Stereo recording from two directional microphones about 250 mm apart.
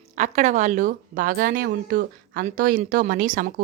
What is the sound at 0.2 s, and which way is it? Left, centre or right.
A woman's voice, right.